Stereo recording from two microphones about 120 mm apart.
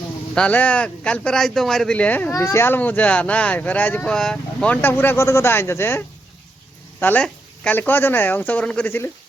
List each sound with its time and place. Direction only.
0.3 s speech: 10° left (ahead or behind)